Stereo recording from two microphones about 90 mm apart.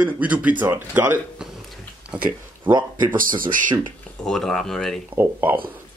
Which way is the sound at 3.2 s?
60° right (ahead or behind).